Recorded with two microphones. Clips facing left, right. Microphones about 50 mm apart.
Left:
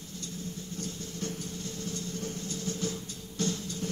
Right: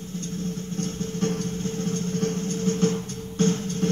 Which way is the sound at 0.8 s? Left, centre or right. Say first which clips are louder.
Right 11 dB; right.